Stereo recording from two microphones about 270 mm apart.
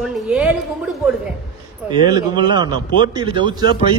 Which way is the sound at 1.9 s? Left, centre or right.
Centre.